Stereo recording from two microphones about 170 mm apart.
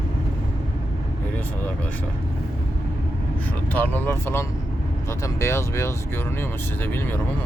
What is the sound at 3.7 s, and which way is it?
Speech, 10° left (ahead or behind).